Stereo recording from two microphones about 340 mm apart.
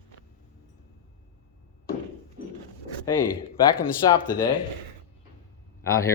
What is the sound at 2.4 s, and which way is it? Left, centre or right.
Zipper, right.